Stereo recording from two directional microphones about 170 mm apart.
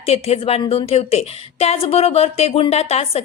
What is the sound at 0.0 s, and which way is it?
A woman's voice, 35° left (ahead or behind).